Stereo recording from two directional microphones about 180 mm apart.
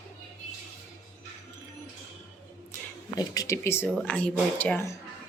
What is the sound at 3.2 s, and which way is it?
Speech, 20° left (ahead or behind).